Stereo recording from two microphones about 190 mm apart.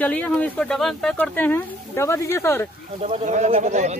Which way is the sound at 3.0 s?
40° right (ahead or behind).